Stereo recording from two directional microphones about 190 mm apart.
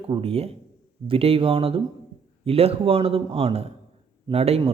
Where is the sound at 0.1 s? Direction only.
30° right (ahead or behind).